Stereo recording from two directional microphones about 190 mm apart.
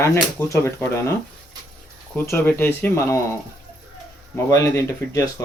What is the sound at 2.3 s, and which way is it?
Speech, 10° left (ahead or behind).